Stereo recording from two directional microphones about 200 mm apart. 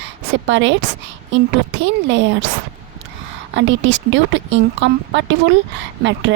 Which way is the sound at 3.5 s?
65° right (ahead or behind).